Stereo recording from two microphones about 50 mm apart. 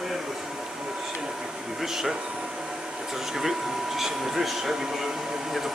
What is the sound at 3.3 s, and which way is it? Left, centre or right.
Speech, centre.